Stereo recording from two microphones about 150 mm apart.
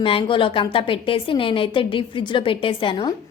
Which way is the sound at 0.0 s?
35° left (ahead or behind).